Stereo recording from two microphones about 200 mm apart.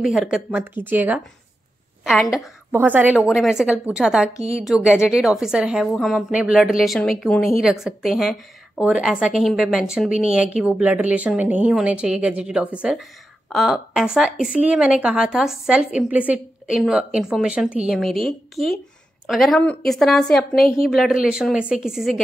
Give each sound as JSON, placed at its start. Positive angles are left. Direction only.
{"t": 0.0, "sound": "a woman's voice", "side_deg": -5}
{"t": 4.4, "sound": "a woman's voice", "side_deg": -30}
{"t": 4.6, "sound": "a woman's voice", "side_deg": -5}